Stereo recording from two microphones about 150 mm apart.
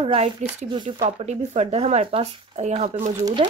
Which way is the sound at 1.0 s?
50° right (ahead or behind).